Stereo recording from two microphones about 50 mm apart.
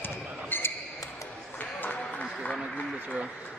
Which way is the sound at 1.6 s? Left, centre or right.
Left.